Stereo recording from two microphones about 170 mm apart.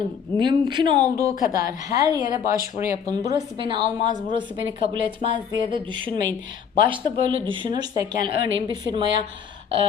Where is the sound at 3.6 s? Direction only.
30° right (ahead or behind).